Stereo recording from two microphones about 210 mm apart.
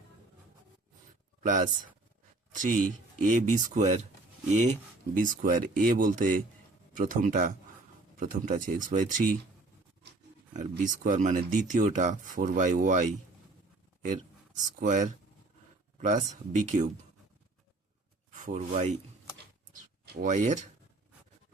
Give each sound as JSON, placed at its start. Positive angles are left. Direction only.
{"t": 1.4, "sound": "speech", "side_deg": -40}
{"t": 10.5, "sound": "speech", "side_deg": -40}
{"t": 14.1, "sound": "speech", "side_deg": -40}
{"t": 18.3, "sound": "speech", "side_deg": -35}
{"t": 20.2, "sound": "speech", "side_deg": -35}